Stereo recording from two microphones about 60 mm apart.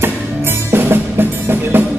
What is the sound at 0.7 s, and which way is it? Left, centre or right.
Music, right.